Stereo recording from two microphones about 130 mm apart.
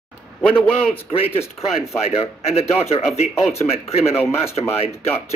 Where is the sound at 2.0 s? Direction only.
50° left (ahead or behind).